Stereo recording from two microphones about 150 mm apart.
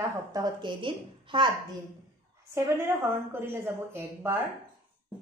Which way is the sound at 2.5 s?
20° right (ahead or behind).